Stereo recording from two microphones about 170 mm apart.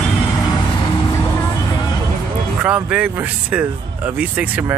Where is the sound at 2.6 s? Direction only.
5° right (ahead or behind).